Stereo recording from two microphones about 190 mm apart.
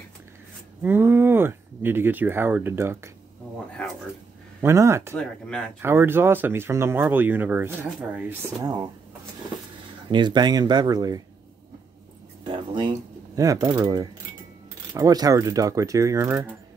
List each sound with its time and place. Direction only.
0.8 s speech: 10° right (ahead or behind)
3.8 s speech: 5° left (ahead or behind)
4.6 s speech: 15° right (ahead or behind)
8.6 s speech: 20° right (ahead or behind)
10.0 s speech: 25° right (ahead or behind)
12.4 s a sound: 25° right (ahead or behind)
13.4 s speech: 20° right (ahead or behind)